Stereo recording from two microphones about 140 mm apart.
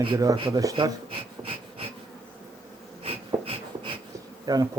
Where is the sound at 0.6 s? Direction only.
35° right (ahead or behind).